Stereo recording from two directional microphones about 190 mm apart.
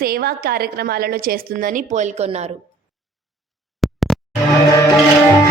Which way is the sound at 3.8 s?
Centre (ahead or behind).